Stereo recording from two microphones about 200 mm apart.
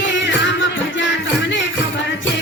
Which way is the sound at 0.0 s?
65° left (ahead or behind).